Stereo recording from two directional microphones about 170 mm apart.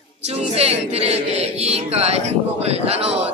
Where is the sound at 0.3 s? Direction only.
35° right (ahead or behind).